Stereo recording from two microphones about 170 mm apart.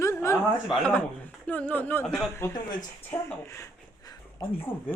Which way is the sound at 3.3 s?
15° left (ahead or behind).